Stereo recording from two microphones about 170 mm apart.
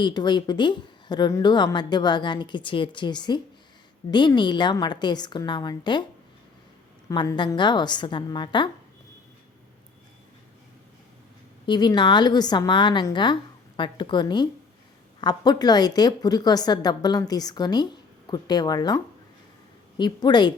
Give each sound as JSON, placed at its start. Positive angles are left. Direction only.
{"t": 0.0, "sound": "a woman's voice", "side_deg": 25}
{"t": 7.1, "sound": "a woman's voice", "side_deg": 25}
{"t": 11.6, "sound": "a woman's voice", "side_deg": 25}